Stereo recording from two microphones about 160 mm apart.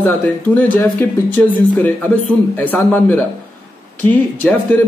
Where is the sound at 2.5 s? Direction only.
10° left (ahead or behind).